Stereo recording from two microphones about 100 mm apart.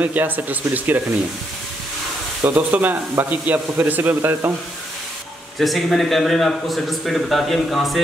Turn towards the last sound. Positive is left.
turn(degrees=0)  # may be behind; listen again after turning